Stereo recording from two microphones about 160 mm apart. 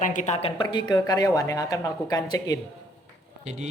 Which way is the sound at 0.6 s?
30° left (ahead or behind).